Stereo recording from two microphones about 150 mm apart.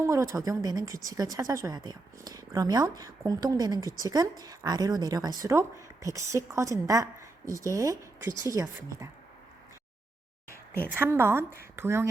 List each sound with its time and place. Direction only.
0.0 s a woman's voice: 20° right (ahead or behind)
10.9 s a woman's voice: 15° right (ahead or behind)